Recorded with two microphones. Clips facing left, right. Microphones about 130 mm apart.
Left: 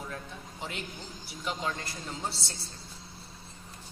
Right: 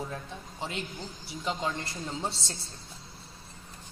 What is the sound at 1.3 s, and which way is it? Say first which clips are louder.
Speech: right 2 dB; 25° right (ahead or behind).